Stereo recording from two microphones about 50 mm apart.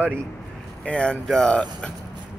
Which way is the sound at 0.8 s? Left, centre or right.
Centre.